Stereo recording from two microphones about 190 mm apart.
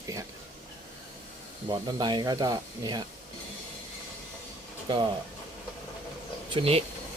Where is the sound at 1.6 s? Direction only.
25° right (ahead or behind).